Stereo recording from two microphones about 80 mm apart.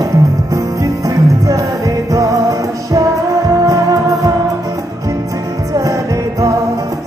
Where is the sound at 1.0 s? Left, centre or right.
Right.